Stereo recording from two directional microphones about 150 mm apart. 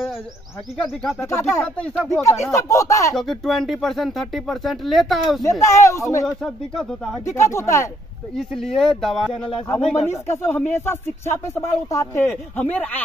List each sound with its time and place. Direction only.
1.6 s speech: 5° left (ahead or behind)
2.2 s speech: 20° left (ahead or behind)
3.2 s speech: centre (ahead or behind)
5.4 s speech: 20° left (ahead or behind)
6.2 s speech: 5° left (ahead or behind)
7.2 s speech: 20° left (ahead or behind)
8.4 s speech: 5° left (ahead or behind)
10.0 s speech: 15° left (ahead or behind)